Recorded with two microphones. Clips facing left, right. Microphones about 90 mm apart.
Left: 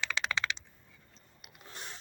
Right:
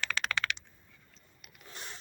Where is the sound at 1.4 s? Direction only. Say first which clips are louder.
Left 1 dB; 25° left (ahead or behind).